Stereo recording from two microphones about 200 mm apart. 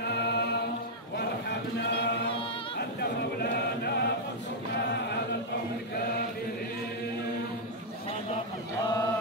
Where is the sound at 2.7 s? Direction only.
55° left (ahead or behind).